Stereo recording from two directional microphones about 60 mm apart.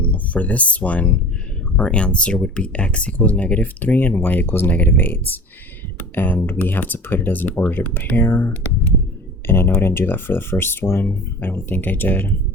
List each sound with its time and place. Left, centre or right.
0.0 s speech: left
8.3 s speech: left